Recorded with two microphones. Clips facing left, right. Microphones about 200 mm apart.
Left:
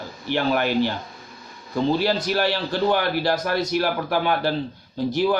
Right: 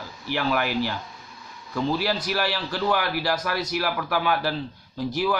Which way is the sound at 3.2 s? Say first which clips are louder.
Left 4 dB; 25° left (ahead or behind).